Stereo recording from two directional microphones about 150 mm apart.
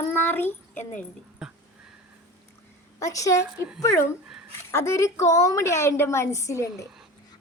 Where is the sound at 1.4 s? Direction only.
5° right (ahead or behind).